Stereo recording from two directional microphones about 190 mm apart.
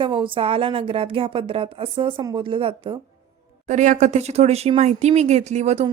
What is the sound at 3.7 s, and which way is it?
Speech, 40° right (ahead or behind).